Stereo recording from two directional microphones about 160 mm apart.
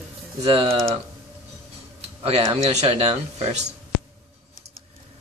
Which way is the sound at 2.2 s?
40° right (ahead or behind).